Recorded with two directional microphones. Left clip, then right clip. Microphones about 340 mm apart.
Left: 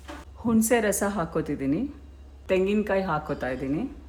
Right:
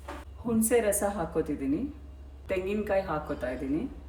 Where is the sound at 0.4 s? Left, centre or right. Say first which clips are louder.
Left 3 dB; left.